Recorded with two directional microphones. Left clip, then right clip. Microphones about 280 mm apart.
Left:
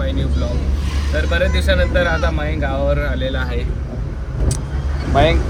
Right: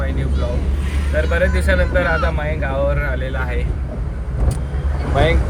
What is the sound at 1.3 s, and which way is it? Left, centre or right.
Speech, centre.